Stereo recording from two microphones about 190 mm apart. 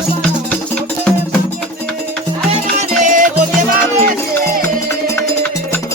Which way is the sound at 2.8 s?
40° right (ahead or behind).